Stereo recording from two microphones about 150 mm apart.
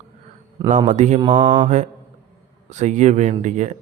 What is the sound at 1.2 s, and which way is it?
Mantra, 30° right (ahead or behind).